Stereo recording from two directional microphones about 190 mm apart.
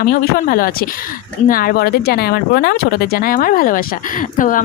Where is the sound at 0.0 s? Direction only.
50° left (ahead or behind).